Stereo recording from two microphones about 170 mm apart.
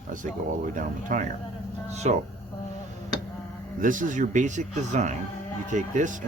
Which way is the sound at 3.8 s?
50° right (ahead or behind).